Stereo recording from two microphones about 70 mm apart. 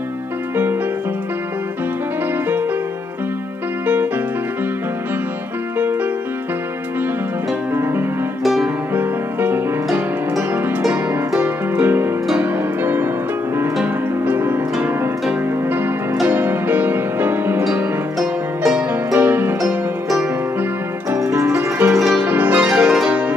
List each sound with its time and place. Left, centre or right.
3.8 s music: right
7.7 s music: right
10.9 s harp: right
12.4 s music: right
14.2 s harp: right
16.3 s music: right
19.1 s music: right
21.1 s music: right; by 23.3 s centre